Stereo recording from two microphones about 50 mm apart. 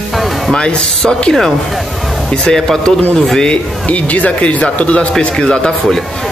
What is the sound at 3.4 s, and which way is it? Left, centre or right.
Speech, left.